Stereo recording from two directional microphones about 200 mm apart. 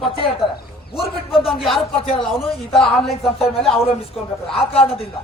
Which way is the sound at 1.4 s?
25° left (ahead or behind).